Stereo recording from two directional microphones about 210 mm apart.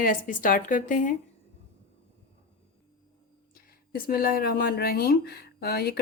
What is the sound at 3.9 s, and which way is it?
Speech, 45° left (ahead or behind).